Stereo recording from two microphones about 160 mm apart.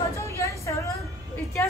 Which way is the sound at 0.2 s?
20° left (ahead or behind).